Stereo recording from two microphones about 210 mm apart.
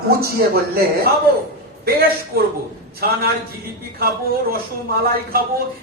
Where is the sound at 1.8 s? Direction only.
45° right (ahead or behind).